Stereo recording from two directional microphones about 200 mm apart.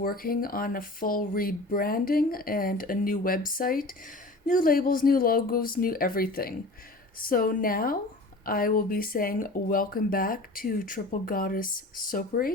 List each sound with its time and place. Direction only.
0.0 s speech: 45° left (ahead or behind)